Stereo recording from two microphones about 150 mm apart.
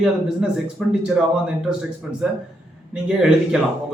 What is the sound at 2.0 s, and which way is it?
A man's voice, 5° right (ahead or behind).